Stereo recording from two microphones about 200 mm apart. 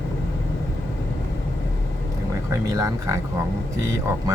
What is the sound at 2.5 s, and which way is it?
Speech, 15° right (ahead or behind).